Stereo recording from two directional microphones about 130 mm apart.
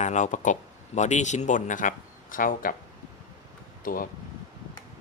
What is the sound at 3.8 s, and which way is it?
Speech, 90° left.